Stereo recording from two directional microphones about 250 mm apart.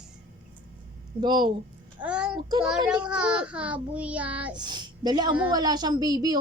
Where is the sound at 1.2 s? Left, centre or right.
Centre.